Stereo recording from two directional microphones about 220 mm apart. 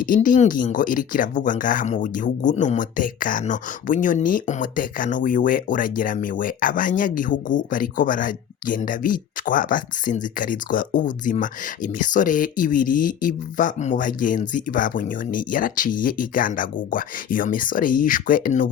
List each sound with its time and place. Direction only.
0.0 s speech: 40° left (ahead or behind)